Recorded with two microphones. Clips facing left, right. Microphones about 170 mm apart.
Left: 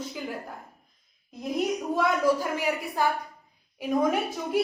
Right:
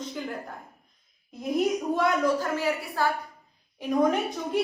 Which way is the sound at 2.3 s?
15° left (ahead or behind).